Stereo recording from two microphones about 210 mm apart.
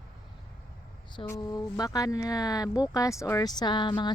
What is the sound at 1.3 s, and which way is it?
A woman's voice, 20° left (ahead or behind).